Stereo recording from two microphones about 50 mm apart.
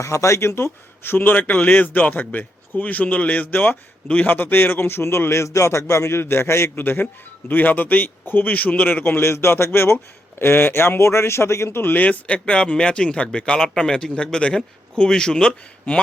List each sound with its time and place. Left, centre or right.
0.0 s a man's voice: left
5.3 s a man's voice: left
6.8 s speech: left
9.2 s a man's voice: left
11.8 s speech: left; by 15.5 s centre